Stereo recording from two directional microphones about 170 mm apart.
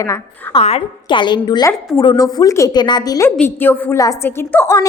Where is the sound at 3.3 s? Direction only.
10° left (ahead or behind).